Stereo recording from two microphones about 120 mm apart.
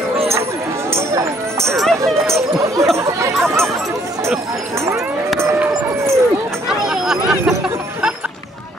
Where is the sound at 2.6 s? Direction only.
25° right (ahead or behind).